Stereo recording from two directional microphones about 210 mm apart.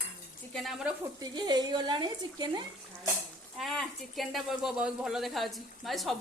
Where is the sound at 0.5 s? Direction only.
Centre (ahead or behind).